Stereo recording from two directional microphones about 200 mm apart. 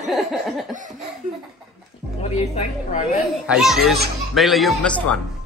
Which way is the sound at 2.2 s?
35° left (ahead or behind).